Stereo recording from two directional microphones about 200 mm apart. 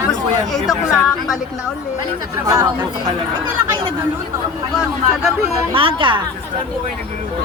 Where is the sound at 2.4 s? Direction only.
20° right (ahead or behind).